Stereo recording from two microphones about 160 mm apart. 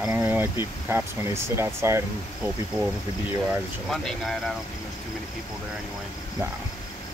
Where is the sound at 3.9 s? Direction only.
Centre (ahead or behind).